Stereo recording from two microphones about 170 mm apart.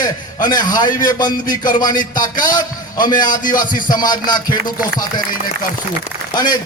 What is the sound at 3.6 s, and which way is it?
Speech, 50° left (ahead or behind).